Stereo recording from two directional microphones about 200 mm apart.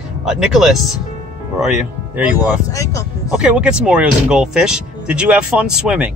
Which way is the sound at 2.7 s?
15° left (ahead or behind).